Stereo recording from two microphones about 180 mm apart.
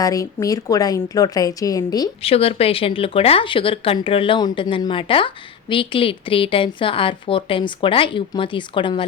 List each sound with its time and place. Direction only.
0.0 s speech: 20° left (ahead or behind)
2.2 s speech: 35° left (ahead or behind)